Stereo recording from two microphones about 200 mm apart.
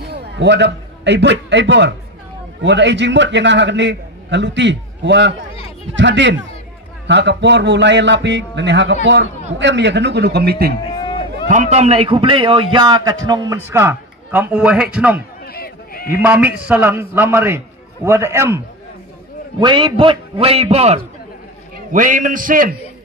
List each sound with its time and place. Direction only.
0.0 s a man's voice: 55° right (ahead or behind)
10.8 s a sound: 25° left (ahead or behind)
11.4 s a man's voice: 35° right (ahead or behind); by 15.2 s 5° right (ahead or behind)
15.4 s a sound: 50° left (ahead or behind)
16.1 s a man's voice: 5° right (ahead or behind)
19.6 s a man's voice: 25° right (ahead or behind); by 22.8 s 45° right (ahead or behind)